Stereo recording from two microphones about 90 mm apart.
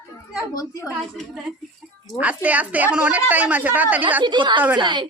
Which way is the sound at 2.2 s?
15° right (ahead or behind).